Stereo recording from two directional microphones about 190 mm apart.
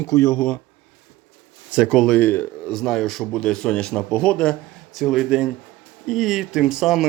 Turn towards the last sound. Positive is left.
turn(degrees=0)  # may be behind; listen again after turning